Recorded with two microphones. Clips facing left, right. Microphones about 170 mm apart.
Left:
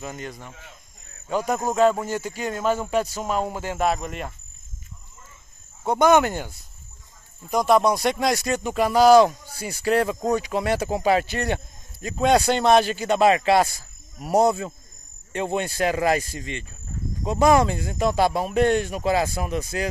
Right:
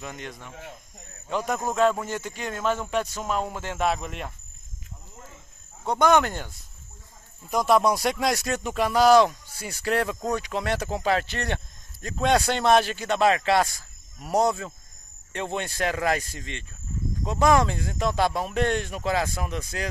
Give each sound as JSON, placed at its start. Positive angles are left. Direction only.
{"t": 0.0, "sound": "speech", "side_deg": 5}
{"t": 5.1, "sound": "cricket", "side_deg": -65}
{"t": 5.9, "sound": "speech", "side_deg": 5}